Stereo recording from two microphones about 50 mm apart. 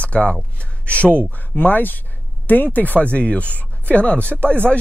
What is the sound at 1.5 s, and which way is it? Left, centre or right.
Speech, left.